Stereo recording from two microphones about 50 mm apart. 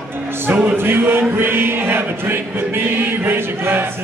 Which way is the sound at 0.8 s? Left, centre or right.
Right.